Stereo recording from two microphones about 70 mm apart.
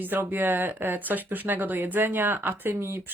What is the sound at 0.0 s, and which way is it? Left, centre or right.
Speech, right.